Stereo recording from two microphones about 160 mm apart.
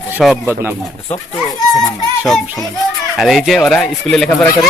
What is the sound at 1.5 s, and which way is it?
Speech, 25° left (ahead or behind).